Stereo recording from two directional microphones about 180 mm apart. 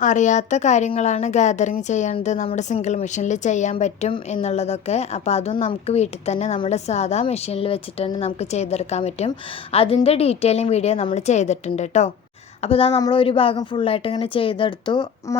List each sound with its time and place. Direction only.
0.0 s a woman's voice: 45° left (ahead or behind); by 15.4 s 25° left (ahead or behind)